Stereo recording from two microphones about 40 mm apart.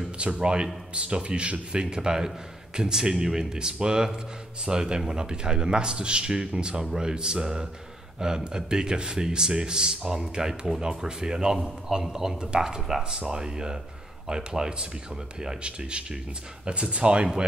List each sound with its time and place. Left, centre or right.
0.2 s a man's voice: right